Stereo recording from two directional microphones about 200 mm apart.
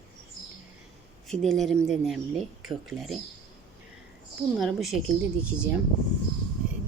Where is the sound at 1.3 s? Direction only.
Centre (ahead or behind).